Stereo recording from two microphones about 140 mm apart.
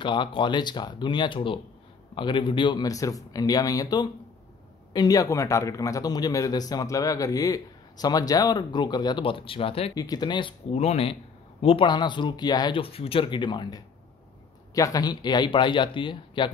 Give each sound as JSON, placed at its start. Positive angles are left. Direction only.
{"t": 0.0, "sound": "a man's voice", "side_deg": 35}
{"t": 9.9, "sound": "speech", "side_deg": 30}
{"t": 10.7, "sound": "speech", "side_deg": 50}